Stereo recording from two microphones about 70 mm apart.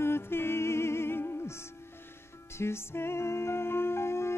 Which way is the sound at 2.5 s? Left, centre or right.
Left.